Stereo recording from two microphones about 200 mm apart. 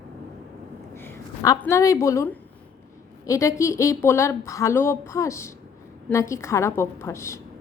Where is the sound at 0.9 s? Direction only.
15° left (ahead or behind).